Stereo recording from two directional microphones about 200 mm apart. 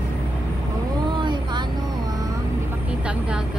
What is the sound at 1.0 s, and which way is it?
Vehicle, 25° right (ahead or behind).